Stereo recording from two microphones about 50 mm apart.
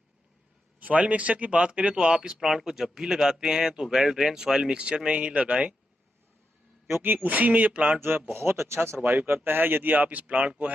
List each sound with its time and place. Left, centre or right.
0.7 s speech: right
2.4 s speech: centre; by 5.8 s right
6.9 s speech: right
7.2 s speech: right
8.3 s speech: right